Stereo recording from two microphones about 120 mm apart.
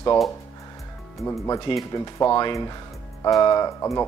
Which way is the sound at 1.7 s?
50° left (ahead or behind).